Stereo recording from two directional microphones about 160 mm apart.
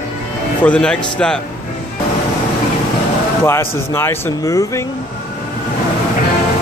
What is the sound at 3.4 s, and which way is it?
Speech, 15° left (ahead or behind).